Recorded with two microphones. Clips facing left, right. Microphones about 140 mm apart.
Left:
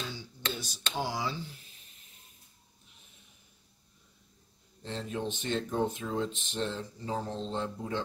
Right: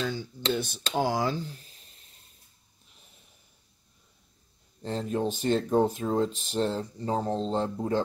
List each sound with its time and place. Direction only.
0.0 s a sound: 50° right (ahead or behind)
0.5 s speech: 55° right (ahead or behind); by 1.8 s 35° right (ahead or behind)
4.8 s speech: 40° right (ahead or behind)